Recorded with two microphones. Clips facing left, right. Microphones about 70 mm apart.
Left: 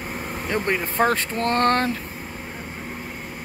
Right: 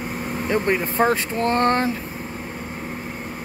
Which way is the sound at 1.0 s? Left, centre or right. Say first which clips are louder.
Left 1 dB; right.